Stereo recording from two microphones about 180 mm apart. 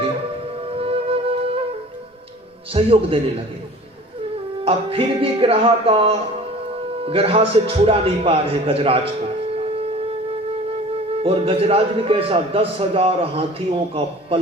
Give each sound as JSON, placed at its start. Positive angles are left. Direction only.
{"t": 0.8, "sound": "music", "side_deg": -30}
{"t": 2.7, "sound": "a man's voice", "side_deg": -30}
{"t": 4.6, "sound": "a man's voice", "side_deg": -30}
{"t": 11.2, "sound": "a man's voice", "side_deg": -30}